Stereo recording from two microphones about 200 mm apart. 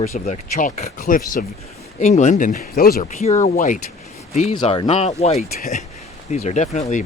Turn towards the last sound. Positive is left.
turn(degrees=35)  # may be behind; listen again after turning